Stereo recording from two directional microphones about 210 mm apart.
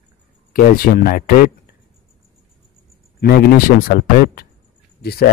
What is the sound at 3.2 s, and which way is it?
Speech, 45° left (ahead or behind).